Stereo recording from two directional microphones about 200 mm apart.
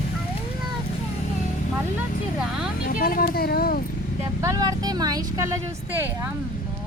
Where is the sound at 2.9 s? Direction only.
45° left (ahead or behind).